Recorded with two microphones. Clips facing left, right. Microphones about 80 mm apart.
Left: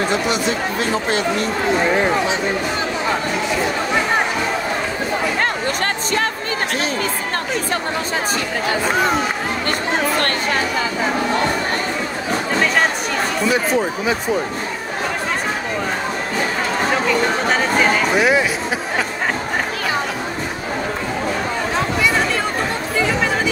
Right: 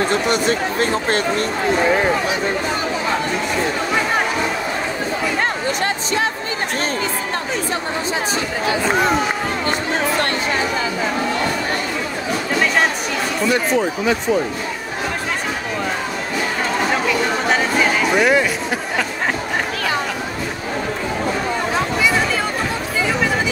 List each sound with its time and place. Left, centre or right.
0.1 s speech: right
13.5 s speech: centre
18.1 s speech: centre